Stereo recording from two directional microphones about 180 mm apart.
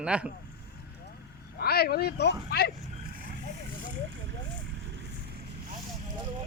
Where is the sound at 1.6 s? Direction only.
60° left (ahead or behind).